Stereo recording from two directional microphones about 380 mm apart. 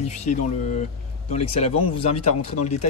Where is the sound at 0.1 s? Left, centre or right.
Centre.